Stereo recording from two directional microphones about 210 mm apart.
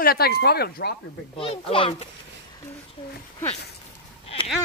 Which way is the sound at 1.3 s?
25° left (ahead or behind).